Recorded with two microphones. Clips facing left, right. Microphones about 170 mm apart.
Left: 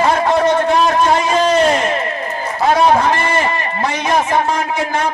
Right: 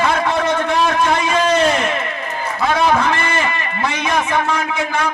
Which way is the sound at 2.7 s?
35° left (ahead or behind).